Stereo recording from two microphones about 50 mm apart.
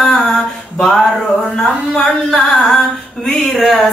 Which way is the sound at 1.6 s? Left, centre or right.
Centre.